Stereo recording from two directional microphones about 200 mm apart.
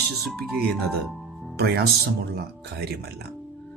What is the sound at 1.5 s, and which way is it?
A man's voice, 50° right (ahead or behind).